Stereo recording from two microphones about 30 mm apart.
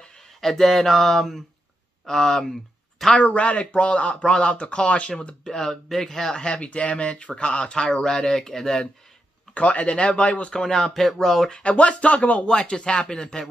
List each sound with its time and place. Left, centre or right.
0.4 s a sound: centre
2.0 s speech: centre
3.2 s speech: left
5.4 s a sound: centre
6.3 s speech: left
7.8 s speech: left
9.5 s speech: left
10.5 s speech: left
10.9 s a sound: centre
11.6 s speech: left
12.6 s speech: left